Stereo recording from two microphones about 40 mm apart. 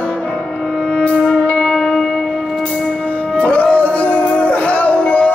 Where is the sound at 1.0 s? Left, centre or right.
Left.